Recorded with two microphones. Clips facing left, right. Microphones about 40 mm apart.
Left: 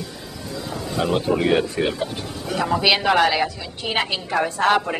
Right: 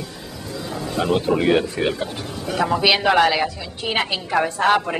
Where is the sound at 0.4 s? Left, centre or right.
Centre.